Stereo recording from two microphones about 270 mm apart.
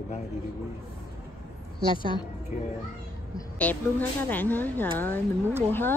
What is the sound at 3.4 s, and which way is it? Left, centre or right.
Speech, centre.